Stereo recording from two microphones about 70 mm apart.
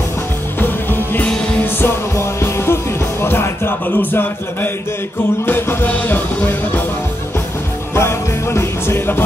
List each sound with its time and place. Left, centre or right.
0.6 s music: left
7.9 s music: left